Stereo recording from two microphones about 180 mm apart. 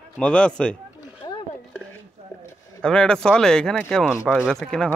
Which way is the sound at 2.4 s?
5° left (ahead or behind).